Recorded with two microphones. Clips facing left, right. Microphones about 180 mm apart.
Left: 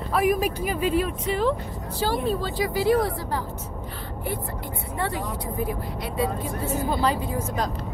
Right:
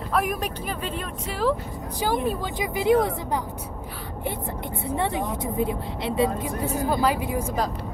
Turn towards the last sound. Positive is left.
turn(degrees=-10)  # may be behind; listen again after turning